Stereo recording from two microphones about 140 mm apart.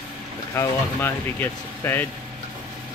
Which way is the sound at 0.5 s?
20° left (ahead or behind).